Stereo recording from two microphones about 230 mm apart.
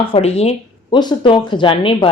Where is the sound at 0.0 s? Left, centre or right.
Left.